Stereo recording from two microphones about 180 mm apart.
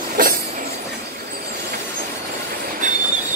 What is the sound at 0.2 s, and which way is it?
Train, 50° right (ahead or behind).